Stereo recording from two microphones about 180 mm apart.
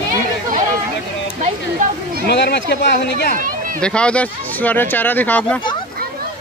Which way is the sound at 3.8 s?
5° left (ahead or behind).